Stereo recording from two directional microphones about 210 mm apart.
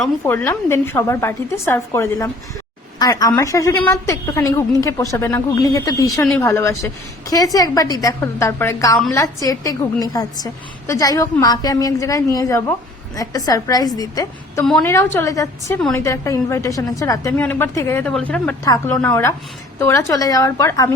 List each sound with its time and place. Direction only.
0.0 s a woman's voice: 10° left (ahead or behind)
14.6 s a woman's voice: 5° left (ahead or behind)